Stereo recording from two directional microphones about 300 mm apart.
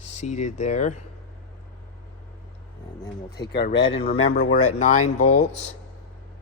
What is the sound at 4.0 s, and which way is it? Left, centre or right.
Speech, left.